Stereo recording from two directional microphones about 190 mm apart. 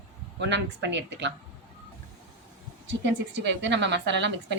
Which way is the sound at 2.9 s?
70° right (ahead or behind).